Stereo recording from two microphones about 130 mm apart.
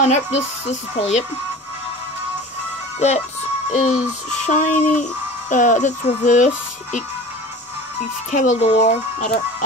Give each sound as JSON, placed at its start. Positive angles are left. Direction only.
{"t": 0.0, "sound": "speech", "side_deg": 60}
{"t": 3.7, "sound": "speech", "side_deg": 65}
{"t": 8.3, "sound": "speech", "side_deg": 65}